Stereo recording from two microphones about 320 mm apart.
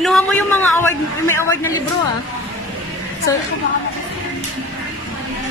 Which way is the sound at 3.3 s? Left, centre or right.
Centre.